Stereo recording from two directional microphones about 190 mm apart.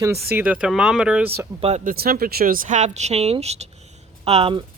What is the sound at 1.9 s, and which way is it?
Speech, 50° right (ahead or behind).